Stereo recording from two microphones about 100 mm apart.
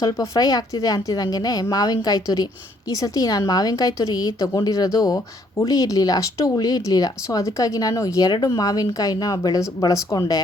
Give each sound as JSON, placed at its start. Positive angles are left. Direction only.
{"t": 0.0, "sound": "speech", "side_deg": 40}